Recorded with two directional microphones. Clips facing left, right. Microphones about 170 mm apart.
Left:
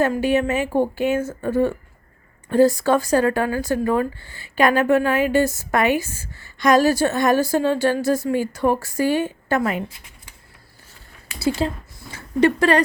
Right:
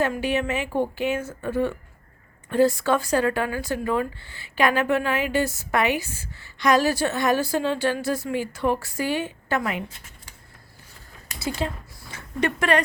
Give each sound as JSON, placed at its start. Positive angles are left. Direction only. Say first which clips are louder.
{"t": 0.0, "sound": "speech", "louder": "left 5 dB", "side_deg": 45}
{"t": 11.6, "sound": "speech", "louder": "left 5 dB", "side_deg": 30}